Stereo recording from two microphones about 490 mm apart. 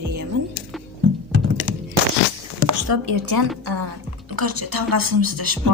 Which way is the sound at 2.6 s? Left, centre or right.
Right.